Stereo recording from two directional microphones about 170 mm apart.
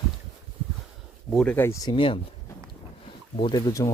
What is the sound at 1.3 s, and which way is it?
Speech, 10° left (ahead or behind).